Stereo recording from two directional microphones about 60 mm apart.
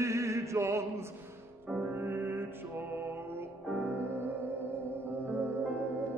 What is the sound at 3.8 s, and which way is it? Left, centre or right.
Music, right.